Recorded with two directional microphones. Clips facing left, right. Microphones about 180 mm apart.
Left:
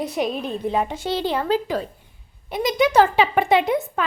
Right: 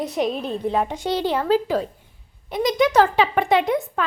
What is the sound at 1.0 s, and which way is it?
Speech, 10° right (ahead or behind).